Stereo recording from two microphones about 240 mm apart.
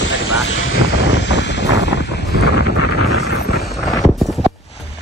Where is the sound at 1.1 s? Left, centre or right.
Left.